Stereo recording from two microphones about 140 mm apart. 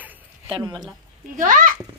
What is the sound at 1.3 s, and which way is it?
Speech, 65° right (ahead or behind).